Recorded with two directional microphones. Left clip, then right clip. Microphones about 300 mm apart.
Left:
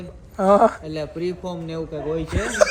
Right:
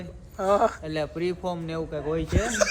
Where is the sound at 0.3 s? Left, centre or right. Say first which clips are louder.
Left 7 dB; centre.